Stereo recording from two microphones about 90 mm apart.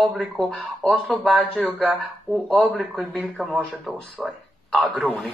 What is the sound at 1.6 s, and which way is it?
Speech, 15° left (ahead or behind).